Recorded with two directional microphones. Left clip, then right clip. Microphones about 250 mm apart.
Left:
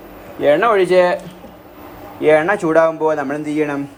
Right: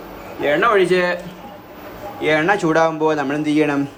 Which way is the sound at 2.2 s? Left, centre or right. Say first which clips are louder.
Left 3 dB; centre.